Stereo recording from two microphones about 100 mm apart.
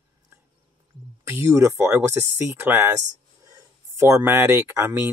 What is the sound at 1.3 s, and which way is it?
Speech, 25° right (ahead or behind).